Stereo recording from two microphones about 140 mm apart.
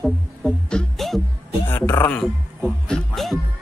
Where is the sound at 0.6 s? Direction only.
5° left (ahead or behind).